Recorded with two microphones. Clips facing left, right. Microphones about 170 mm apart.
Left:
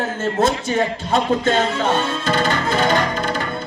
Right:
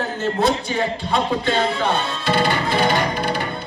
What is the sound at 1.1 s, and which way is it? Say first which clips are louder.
Music: left 4 dB; 45° left (ahead or behind).